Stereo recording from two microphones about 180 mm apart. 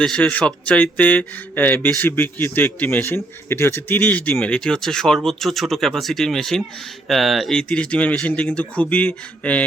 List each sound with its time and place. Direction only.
0.0 s speech: 5° left (ahead or behind)